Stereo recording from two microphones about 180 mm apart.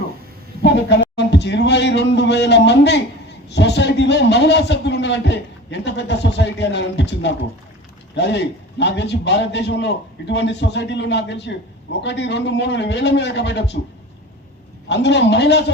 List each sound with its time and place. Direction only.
0.6 s a man's voice: 75° left (ahead or behind)
14.8 s a man's voice: 75° left (ahead or behind)